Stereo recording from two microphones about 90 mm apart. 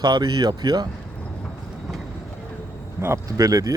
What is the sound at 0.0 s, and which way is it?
Speech, 50° right (ahead or behind).